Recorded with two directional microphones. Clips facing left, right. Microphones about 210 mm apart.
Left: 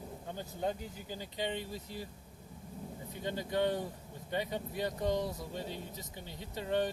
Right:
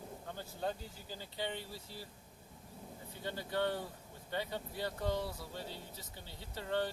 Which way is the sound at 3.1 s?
15° left (ahead or behind).